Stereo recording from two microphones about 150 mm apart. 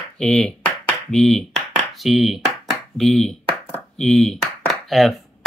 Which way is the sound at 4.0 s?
Centre (ahead or behind).